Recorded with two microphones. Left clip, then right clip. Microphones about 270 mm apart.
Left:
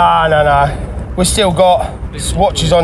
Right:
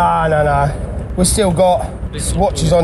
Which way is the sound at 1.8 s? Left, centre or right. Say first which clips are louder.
Left 4 dB; centre.